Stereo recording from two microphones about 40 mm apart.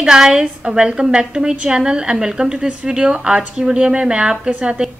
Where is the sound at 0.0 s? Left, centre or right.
Centre.